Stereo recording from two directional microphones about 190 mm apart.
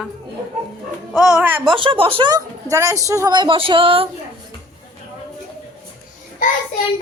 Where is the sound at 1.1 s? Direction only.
5° right (ahead or behind).